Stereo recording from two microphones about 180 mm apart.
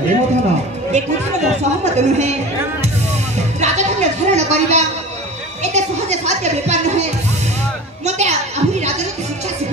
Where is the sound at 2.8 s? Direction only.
40° right (ahead or behind).